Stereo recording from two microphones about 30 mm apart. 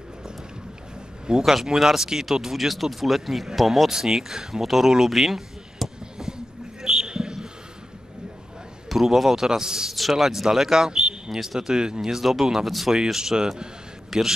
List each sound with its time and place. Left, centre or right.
1.4 s speech: centre
3.9 s speech: centre
6.1 s a sound: right
7.1 s basketball bounce: right
8.8 s a man's voice: centre
9.5 s speech: right
9.9 s speech: centre
11.7 s speech: right
12.0 s speech: centre
14.1 s a man's voice: centre